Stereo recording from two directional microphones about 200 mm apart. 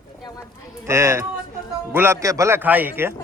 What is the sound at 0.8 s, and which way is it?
A man's voice, 15° right (ahead or behind).